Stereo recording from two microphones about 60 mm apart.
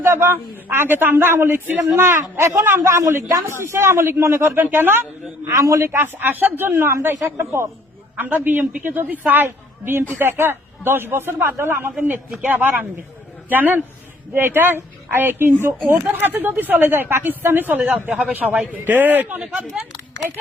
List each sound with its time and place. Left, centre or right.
0.0 s a man's voice: right
2.8 s a man's voice: right
4.6 s a woman's voice: right
5.5 s a man's voice: right
6.1 s a woman's voice: right
8.1 s a woman's voice: right